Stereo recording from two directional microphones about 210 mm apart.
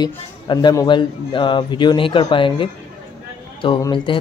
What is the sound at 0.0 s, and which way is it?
A man's voice, 20° left (ahead or behind).